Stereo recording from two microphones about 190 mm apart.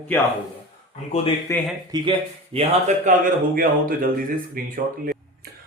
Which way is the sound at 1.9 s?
30° right (ahead or behind).